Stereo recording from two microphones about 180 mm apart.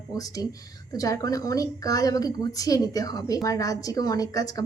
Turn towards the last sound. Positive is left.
turn(degrees=20)  # may be behind; listen again after turning